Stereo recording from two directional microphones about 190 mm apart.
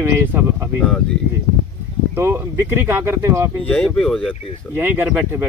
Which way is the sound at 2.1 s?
15° right (ahead or behind).